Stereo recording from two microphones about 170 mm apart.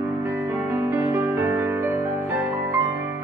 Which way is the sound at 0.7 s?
15° right (ahead or behind).